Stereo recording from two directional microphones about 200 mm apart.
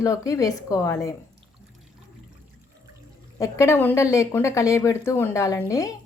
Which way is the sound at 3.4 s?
15° left (ahead or behind).